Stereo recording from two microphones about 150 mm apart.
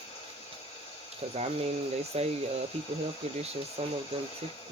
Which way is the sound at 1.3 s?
40° right (ahead or behind).